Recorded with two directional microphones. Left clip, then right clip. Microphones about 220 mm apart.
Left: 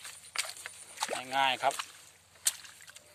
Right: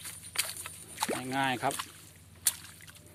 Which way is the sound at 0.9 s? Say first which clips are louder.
Right 2 dB; centre (ahead or behind).